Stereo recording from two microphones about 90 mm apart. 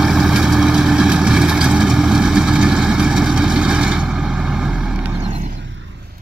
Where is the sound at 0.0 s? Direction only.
5° right (ahead or behind).